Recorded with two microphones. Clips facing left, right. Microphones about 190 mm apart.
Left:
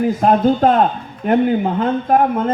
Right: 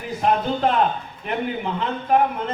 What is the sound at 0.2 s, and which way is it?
Speech, 45° left (ahead or behind).